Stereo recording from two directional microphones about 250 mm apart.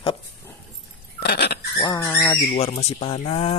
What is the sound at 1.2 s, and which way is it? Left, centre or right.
Goat, left.